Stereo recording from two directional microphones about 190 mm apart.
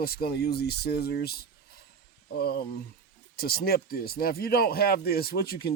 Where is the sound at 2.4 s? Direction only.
55° left (ahead or behind).